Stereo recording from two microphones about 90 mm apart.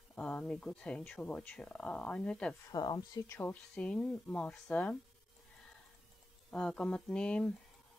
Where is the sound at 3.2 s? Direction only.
25° left (ahead or behind).